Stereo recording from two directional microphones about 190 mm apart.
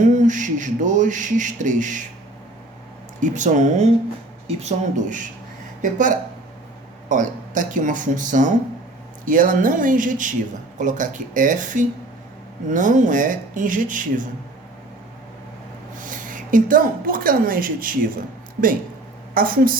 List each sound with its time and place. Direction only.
0.0 s speech: 40° right (ahead or behind)
3.2 s speech: 40° right (ahead or behind)
16.0 s a woman's voice: 45° right (ahead or behind)
19.3 s a woman's voice: 50° right (ahead or behind)